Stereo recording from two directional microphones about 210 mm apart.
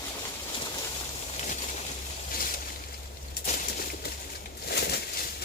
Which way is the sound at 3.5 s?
40° left (ahead or behind).